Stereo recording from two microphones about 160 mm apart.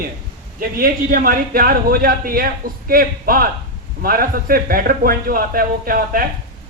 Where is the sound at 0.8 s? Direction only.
60° right (ahead or behind).